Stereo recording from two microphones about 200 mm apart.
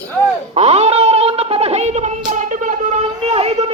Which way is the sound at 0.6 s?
35° right (ahead or behind).